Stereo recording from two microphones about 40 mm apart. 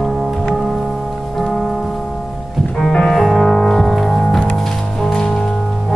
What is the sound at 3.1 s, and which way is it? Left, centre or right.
Music, centre.